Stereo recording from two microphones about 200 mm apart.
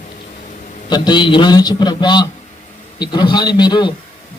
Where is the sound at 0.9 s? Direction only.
20° left (ahead or behind).